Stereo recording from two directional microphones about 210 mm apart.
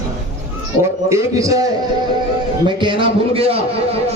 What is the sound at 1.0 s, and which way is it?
Speech, 15° right (ahead or behind).